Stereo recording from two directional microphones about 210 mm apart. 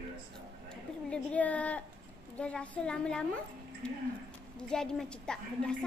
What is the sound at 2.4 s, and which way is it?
A woman's voice, 5° left (ahead or behind).